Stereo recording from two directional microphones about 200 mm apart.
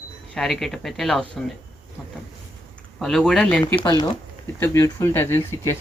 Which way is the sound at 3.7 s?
20° left (ahead or behind).